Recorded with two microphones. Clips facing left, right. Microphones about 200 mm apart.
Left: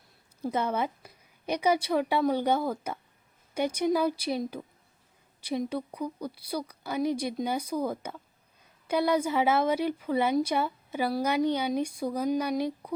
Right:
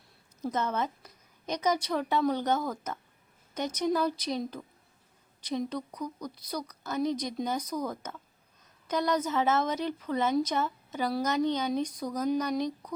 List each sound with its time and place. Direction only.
0.5 s a woman's voice: 10° left (ahead or behind)
11.9 s speech: 30° left (ahead or behind)
12.1 s a woman's voice: 10° left (ahead or behind)